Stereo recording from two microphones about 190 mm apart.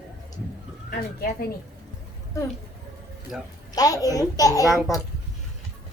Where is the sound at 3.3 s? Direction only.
5° right (ahead or behind).